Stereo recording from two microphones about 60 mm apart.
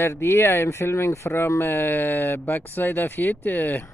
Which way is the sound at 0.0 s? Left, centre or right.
Left.